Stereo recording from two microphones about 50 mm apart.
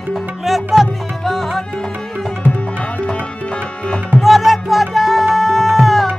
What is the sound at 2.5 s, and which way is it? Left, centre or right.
Tabla, left.